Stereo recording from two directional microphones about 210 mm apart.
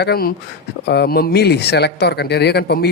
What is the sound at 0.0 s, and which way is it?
Speech, 45° left (ahead or behind).